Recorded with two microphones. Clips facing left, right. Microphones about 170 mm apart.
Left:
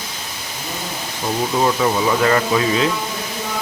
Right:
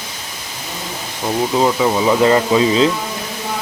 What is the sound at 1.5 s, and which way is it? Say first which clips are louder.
Speech: right 2 dB; 20° right (ahead or behind).